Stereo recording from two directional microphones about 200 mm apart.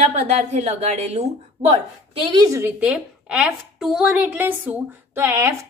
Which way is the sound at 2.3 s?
20° right (ahead or behind).